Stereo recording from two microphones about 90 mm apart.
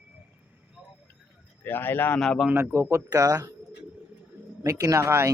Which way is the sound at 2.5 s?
25° right (ahead or behind).